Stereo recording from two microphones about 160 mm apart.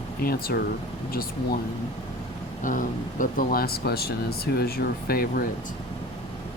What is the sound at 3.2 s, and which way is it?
Speech, 60° left (ahead or behind).